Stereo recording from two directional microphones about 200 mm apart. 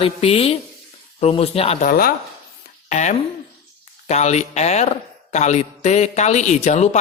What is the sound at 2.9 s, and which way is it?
Speech, 35° left (ahead or behind).